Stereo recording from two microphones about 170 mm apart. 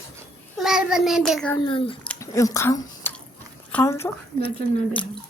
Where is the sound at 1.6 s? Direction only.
30° left (ahead or behind).